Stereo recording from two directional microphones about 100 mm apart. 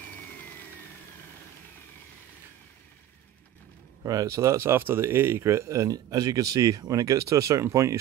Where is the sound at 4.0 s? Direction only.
35° right (ahead or behind).